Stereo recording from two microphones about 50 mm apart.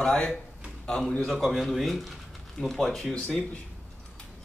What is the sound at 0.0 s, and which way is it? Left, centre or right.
A man's voice, left.